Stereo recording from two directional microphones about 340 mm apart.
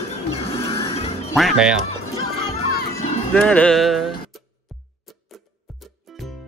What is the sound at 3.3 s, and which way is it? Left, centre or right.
Speech, centre.